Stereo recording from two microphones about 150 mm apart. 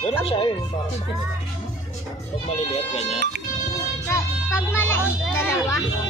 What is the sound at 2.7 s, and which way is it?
Speech, 45° left (ahead or behind).